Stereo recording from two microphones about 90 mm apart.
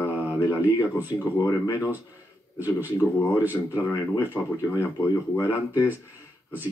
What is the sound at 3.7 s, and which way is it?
Speech, 30° left (ahead or behind).